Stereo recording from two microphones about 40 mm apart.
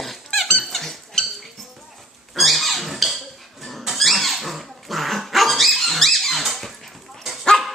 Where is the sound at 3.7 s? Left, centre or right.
Centre.